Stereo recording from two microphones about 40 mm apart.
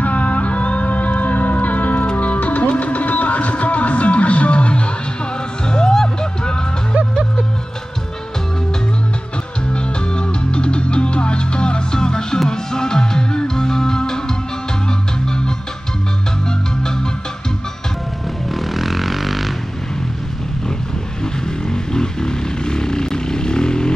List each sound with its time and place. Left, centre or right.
0.0 s music: left
5.7 s music: centre
9.7 s music: left
18.5 s vehicle: centre
21.5 s vehicle: centre